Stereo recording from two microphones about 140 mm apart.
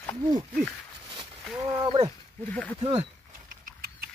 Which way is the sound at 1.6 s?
30° right (ahead or behind).